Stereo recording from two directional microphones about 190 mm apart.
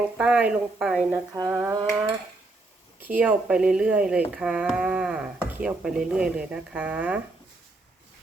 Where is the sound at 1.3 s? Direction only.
15° right (ahead or behind).